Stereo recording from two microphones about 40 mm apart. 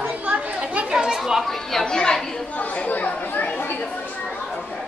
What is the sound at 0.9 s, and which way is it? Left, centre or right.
Speech, centre.